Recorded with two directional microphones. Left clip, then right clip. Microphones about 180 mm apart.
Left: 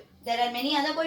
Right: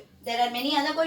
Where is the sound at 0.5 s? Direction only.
15° left (ahead or behind).